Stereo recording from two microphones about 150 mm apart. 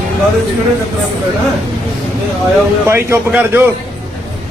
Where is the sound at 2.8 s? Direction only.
15° right (ahead or behind).